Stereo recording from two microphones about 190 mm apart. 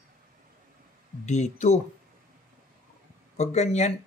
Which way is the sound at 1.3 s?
35° left (ahead or behind).